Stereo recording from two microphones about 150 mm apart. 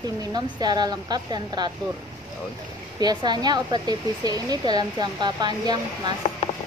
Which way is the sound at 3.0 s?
30° right (ahead or behind).